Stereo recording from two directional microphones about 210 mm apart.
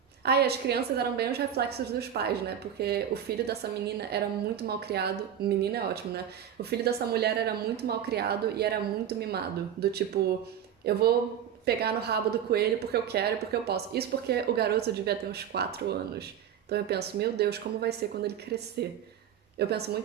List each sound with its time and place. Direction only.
0.2 s a woman's voice: 50° right (ahead or behind)
6.6 s a woman's voice: 50° right (ahead or behind)